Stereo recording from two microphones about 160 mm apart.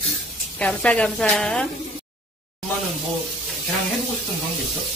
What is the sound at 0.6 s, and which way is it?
Speech, 5° left (ahead or behind).